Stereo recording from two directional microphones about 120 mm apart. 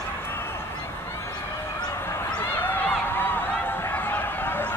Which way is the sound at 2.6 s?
15° left (ahead or behind).